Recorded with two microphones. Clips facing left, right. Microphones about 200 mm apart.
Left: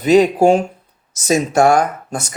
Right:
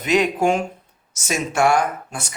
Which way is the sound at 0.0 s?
35° left (ahead or behind).